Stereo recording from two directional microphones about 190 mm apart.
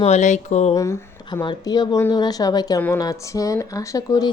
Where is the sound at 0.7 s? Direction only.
15° left (ahead or behind).